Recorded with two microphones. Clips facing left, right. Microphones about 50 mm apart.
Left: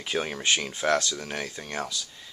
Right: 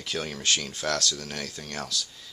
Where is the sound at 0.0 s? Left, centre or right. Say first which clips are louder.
Left 3 dB; left.